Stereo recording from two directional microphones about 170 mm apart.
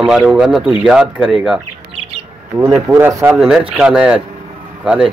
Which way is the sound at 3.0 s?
15° right (ahead or behind).